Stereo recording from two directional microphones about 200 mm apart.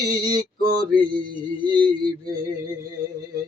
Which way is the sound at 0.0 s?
20° right (ahead or behind).